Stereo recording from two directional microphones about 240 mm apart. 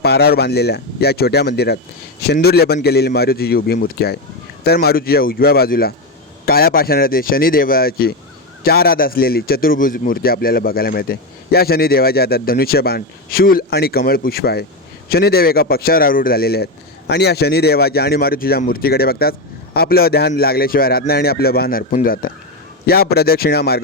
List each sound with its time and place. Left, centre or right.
0.0 s a man's voice: left